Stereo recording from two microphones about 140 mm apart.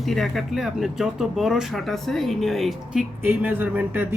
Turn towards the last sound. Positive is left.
turn(degrees=-15)  # may be behind; listen again after turning